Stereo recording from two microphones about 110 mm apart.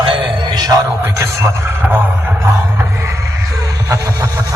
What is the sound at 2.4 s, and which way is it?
Music, 25° right (ahead or behind).